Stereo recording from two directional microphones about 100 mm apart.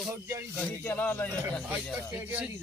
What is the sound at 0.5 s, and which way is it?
Speech, 15° left (ahead or behind).